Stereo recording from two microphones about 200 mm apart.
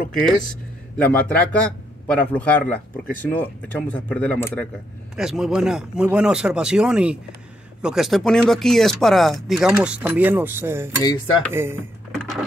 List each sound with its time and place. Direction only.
0.1 s speech: 5° left (ahead or behind)
5.1 s speech: 5° right (ahead or behind)
11.0 s dishes: 20° left (ahead or behind)
11.5 s speech: 10° right (ahead or behind)